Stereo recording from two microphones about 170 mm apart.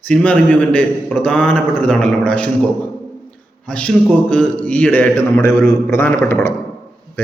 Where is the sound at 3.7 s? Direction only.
5° left (ahead or behind).